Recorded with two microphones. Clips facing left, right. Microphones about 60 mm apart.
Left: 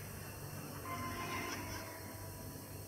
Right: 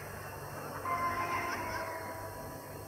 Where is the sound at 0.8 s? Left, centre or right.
Right.